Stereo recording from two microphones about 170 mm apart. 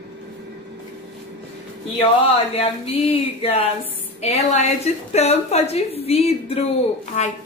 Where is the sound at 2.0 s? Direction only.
35° left (ahead or behind).